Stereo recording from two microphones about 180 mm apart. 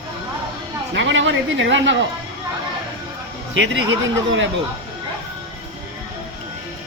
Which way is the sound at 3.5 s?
90° right.